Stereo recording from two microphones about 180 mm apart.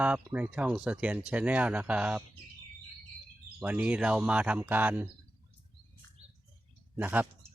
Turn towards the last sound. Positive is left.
turn(degrees=-10)  # may be behind; listen again after turning